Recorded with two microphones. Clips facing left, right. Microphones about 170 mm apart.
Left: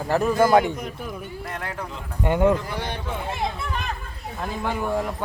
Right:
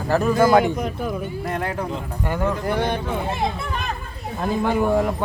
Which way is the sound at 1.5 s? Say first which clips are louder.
Right 8 dB; 15° right (ahead or behind).